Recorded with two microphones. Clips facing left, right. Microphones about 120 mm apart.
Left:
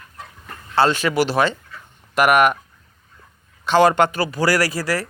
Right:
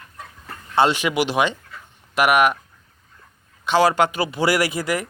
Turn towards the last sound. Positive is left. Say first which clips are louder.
# left 1 dB
turn(degrees=-20)  # may be behind; listen again after turning